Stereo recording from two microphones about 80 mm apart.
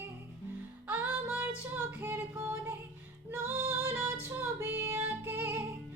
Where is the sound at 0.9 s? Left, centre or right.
Right.